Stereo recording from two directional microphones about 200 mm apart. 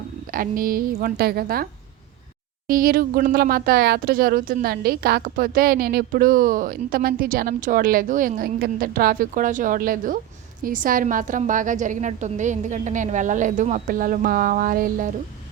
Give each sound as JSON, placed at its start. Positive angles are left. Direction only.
{"t": 0.3, "sound": "speech", "side_deg": -45}
{"t": 2.6, "sound": "a woman's voice", "side_deg": -45}